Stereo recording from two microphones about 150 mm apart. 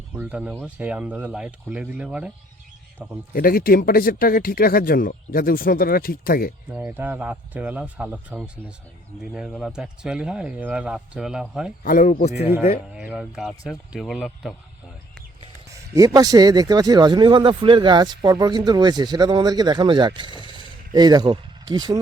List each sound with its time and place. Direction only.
0.2 s speech: 10° right (ahead or behind)
3.3 s speech: 75° left (ahead or behind)
6.7 s speech: 10° right (ahead or behind)
11.8 s speech: 65° left (ahead or behind)
12.9 s speech: 5° right (ahead or behind)
16.0 s speech: 25° right (ahead or behind)